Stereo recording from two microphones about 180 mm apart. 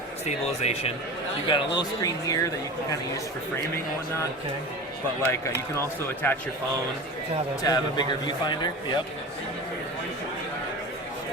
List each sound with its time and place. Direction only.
0.3 s speech: 35° left (ahead or behind); by 2.5 s 20° left (ahead or behind)
6.2 s speech: 10° left (ahead or behind)
7.6 s speech: 20° left (ahead or behind)